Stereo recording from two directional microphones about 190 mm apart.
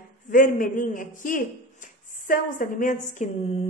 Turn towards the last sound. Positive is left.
turn(degrees=40)  # may be behind; listen again after turning